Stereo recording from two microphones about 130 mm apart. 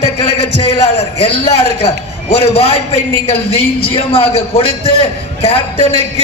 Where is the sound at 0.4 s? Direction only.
50° left (ahead or behind).